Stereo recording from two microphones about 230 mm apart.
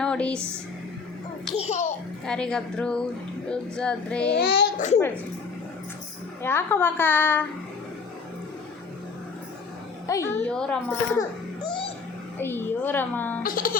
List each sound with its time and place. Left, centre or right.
0.0 s a sound: centre
1.5 s a child's voice: left
1.8 s a child's voice: centre
4.4 s a child's voice: left
6.4 s a woman's voice: centre
10.1 s a woman's voice: centre
12.4 s a woman's voice: centre
13.4 s speech: left